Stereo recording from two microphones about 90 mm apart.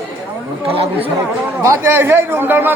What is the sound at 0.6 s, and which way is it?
Chatter, 90° right.